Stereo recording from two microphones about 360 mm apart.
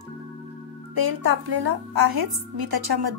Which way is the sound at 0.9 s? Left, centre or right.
Right.